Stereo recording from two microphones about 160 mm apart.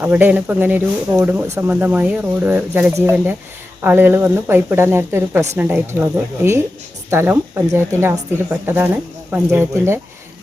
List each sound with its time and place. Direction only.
0.0 s speech: 10° right (ahead or behind)